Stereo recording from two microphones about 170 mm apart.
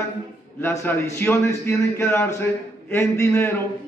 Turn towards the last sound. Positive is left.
turn(degrees=15)  # may be behind; listen again after turning